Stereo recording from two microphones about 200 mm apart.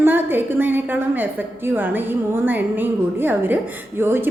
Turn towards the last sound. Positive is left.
turn(degrees=-10)  # may be behind; listen again after turning